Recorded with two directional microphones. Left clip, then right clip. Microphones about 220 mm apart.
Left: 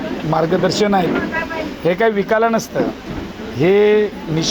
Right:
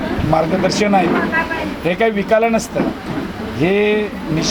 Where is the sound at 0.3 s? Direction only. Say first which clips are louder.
Left 1 dB; 40° left (ahead or behind).